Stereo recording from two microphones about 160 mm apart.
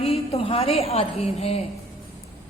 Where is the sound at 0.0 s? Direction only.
40° left (ahead or behind).